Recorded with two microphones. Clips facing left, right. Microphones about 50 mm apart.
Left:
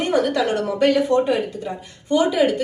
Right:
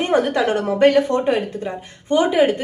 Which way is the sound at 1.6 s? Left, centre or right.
Right.